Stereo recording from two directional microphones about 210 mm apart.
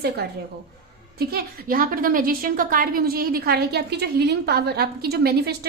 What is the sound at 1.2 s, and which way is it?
A woman's voice, 45° right (ahead or behind).